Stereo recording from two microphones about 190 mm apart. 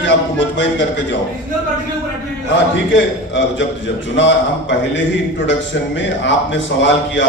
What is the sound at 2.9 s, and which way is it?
A man's voice, 75° left (ahead or behind).